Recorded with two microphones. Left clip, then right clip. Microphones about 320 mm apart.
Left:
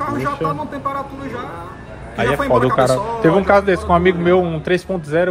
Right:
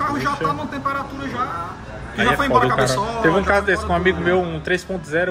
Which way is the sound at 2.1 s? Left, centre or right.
Centre.